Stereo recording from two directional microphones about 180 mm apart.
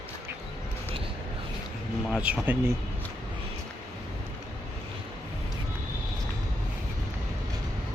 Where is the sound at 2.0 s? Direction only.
5° right (ahead or behind).